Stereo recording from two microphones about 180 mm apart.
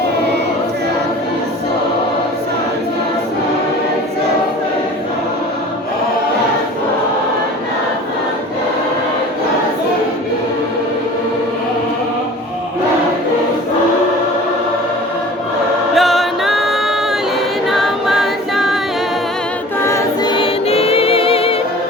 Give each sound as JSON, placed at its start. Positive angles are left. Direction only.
{"t": 16.0, "sound": "music", "side_deg": 0}
{"t": 17.7, "sound": "a capella", "side_deg": 0}
{"t": 19.8, "sound": "choir", "side_deg": 15}
{"t": 20.3, "sound": "choir", "side_deg": 30}